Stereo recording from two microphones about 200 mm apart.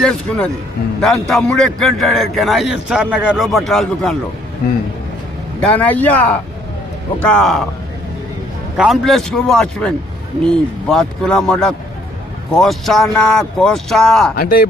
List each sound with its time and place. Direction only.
0.0 s a man's voice: 5° left (ahead or behind)
5.5 s a man's voice: 5° left (ahead or behind)
8.8 s a man's voice: centre (ahead or behind)
14.3 s speech: 45° left (ahead or behind)